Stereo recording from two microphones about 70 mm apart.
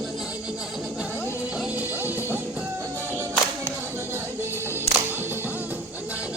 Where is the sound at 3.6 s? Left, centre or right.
Right.